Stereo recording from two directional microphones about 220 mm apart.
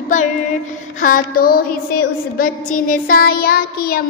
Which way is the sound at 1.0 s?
40° left (ahead or behind).